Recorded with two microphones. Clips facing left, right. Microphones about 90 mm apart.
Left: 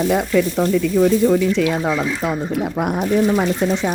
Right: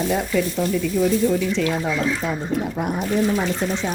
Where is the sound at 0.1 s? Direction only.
60° left (ahead or behind).